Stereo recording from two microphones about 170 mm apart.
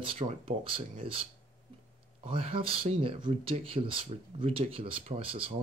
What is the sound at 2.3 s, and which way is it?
Speech, 35° right (ahead or behind).